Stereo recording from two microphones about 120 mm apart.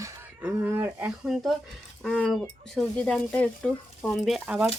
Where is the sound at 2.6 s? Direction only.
5° left (ahead or behind).